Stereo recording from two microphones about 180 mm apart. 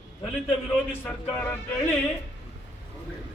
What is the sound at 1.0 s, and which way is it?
Speech, 10° left (ahead or behind).